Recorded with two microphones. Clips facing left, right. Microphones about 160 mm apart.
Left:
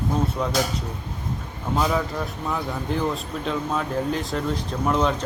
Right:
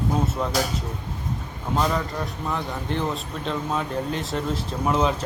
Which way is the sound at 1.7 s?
5° left (ahead or behind).